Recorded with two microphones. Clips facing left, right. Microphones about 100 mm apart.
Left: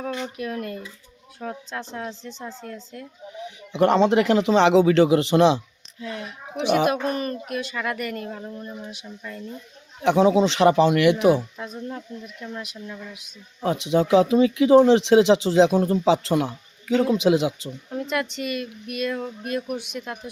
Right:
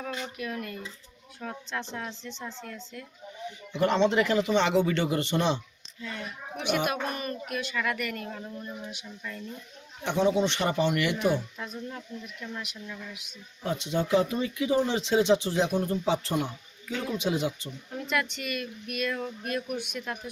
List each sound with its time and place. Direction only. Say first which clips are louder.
0.0 s speech: left 6 dB; 35° left (ahead or behind)
3.7 s speech: left 6 dB; 90° left
6.6 s speech: left 8 dB; 35° left (ahead or behind)
10.0 s speech: left 7 dB; 90° left
11.7 s speech: left 5 dB; 30° left (ahead or behind)
13.6 s speech: left 8 dB; 75° left (ahead or behind)
17.9 s speech: left 4 dB; 30° left (ahead or behind)